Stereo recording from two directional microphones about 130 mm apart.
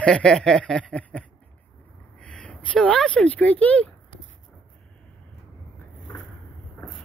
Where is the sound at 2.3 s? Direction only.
10° left (ahead or behind).